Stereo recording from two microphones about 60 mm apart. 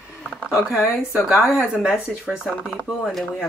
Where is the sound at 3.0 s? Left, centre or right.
Centre.